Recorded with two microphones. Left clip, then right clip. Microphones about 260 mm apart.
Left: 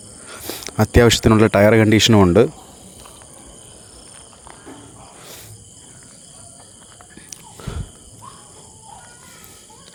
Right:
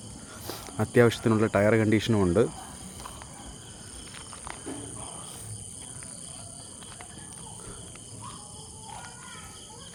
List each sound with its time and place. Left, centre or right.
0.3 s speech: left
4.4 s insect: centre
7.3 s walk: left